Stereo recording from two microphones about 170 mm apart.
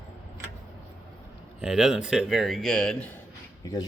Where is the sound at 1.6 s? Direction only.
5° right (ahead or behind).